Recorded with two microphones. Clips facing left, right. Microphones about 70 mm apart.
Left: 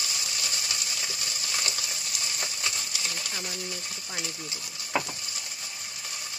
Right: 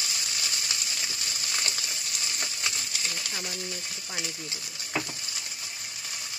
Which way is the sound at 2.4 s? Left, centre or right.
Left.